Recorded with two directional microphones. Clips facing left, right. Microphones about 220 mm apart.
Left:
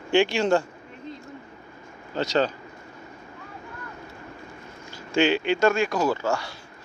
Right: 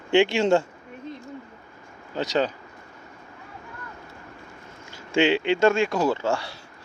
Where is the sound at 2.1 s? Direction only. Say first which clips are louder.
Left 1 dB; 15° right (ahead or behind).